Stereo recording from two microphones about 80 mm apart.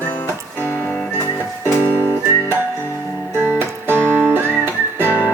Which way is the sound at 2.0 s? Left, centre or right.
Left.